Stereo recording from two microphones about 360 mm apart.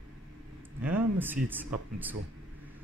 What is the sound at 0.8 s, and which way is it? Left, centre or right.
Speech, centre.